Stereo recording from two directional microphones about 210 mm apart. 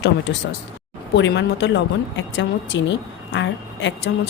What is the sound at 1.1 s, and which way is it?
Speech, 55° left (ahead or behind).